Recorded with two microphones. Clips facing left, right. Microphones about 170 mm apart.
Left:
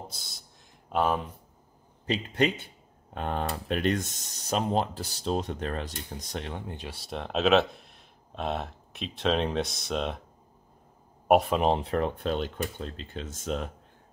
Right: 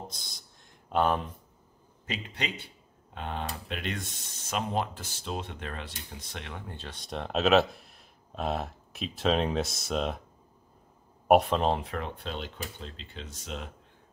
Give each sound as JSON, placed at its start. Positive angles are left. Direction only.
{"t": 0.1, "sound": "speech", "side_deg": 5}
{"t": 2.3, "sound": "speech", "side_deg": 50}
{"t": 6.7, "sound": "speech", "side_deg": 10}
{"t": 11.2, "sound": "speech", "side_deg": 0}
{"t": 11.8, "sound": "speech", "side_deg": 35}
{"t": 12.2, "sound": "speech", "side_deg": 50}